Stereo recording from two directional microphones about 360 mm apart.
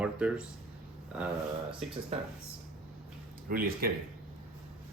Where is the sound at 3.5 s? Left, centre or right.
Right.